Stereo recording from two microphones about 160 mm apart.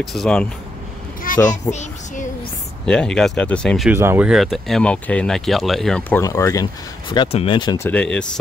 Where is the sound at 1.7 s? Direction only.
45° left (ahead or behind).